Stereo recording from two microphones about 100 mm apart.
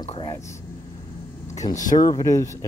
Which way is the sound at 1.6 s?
40° left (ahead or behind).